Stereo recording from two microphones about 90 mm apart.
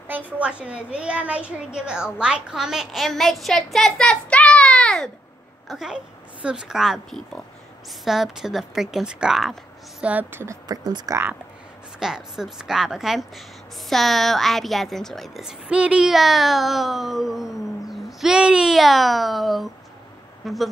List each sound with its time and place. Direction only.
0.1 s a child's voice: 15° right (ahead or behind); by 5.1 s 10° left (ahead or behind)
5.7 s a child's voice: 5° right (ahead or behind)
10.0 s a woman's voice: 15° right (ahead or behind)
10.4 s speech: 35° right (ahead or behind)
10.8 s speech: 50° right (ahead or behind)
12.0 s a child's voice: 5° right (ahead or behind)
15.7 s a child's voice: 10° right (ahead or behind)